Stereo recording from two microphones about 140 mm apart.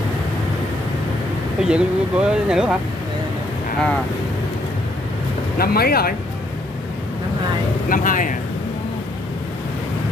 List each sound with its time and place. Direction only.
1.6 s speech: 5° right (ahead or behind)
5.6 s speech: 90° left
7.9 s speech: 70° left (ahead or behind)